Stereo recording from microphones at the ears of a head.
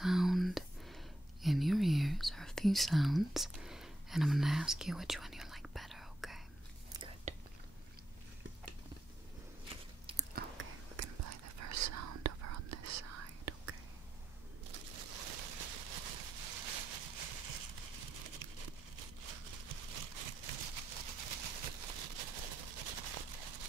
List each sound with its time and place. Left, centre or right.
0.0 s whispering: centre
10.3 s whispering: right
14.7 s a sound: right